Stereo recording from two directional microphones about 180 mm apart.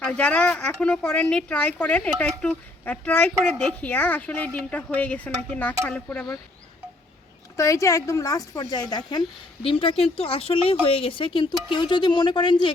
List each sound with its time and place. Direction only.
0.0 s speech: 5° left (ahead or behind)
7.5 s speech: 15° left (ahead or behind)